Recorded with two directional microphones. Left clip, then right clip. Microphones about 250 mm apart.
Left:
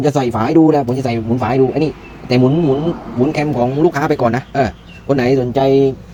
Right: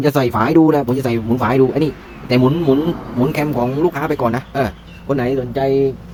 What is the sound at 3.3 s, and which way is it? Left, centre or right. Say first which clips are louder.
Speech: left 3 dB; centre.